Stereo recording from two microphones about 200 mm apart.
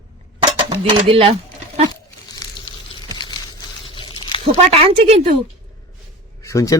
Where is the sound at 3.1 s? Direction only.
20° left (ahead or behind).